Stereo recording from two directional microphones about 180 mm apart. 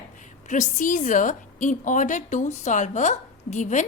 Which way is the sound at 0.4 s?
45° left (ahead or behind).